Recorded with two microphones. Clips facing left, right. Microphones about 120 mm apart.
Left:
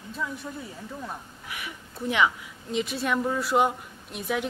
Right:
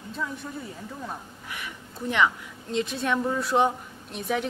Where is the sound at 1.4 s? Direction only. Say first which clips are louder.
Even; 10° left (ahead or behind).